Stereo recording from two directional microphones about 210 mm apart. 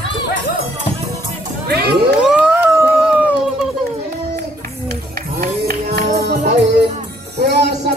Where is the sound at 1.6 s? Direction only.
50° right (ahead or behind).